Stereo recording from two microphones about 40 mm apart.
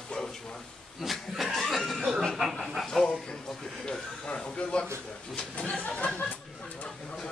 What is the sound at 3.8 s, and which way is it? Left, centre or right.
Speech, left.